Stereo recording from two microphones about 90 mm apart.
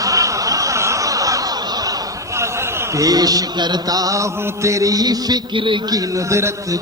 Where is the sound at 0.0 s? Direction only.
40° right (ahead or behind).